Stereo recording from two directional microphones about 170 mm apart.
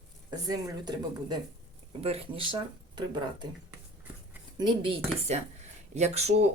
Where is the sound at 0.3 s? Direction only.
20° right (ahead or behind).